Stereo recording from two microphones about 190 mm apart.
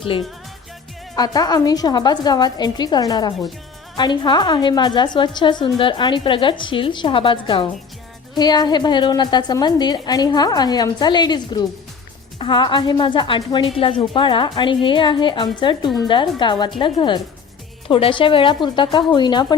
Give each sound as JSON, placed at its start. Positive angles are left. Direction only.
{"t": 1.1, "sound": "a woman's voice", "side_deg": 20}